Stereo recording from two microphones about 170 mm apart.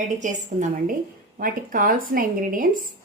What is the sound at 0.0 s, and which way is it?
A woman's voice, 45° right (ahead or behind).